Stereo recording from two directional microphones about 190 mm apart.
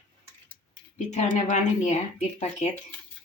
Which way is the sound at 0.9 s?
40° left (ahead or behind).